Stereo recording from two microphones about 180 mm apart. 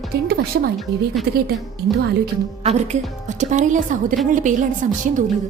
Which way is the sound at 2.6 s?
40° right (ahead or behind).